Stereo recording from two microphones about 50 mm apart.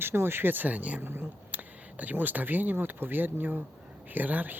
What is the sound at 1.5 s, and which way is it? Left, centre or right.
Speech, right.